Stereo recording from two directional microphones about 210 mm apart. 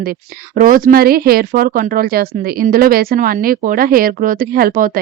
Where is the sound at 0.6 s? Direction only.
40° right (ahead or behind).